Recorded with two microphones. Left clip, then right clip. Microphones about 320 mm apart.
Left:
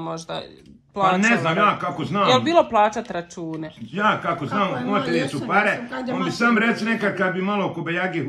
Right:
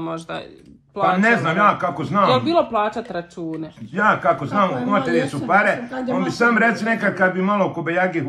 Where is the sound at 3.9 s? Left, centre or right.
Centre.